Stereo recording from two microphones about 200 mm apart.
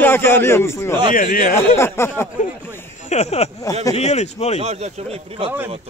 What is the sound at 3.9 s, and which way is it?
Speech, 35° left (ahead or behind).